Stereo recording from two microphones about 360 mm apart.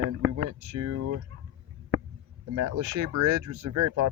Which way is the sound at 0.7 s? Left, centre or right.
Right.